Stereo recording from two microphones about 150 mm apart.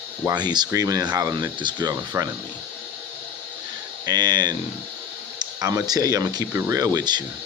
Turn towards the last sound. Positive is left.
turn(degrees=-25)  # may be behind; listen again after turning